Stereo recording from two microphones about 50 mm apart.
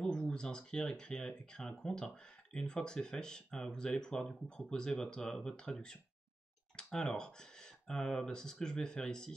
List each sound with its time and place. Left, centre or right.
0.3 s speech: centre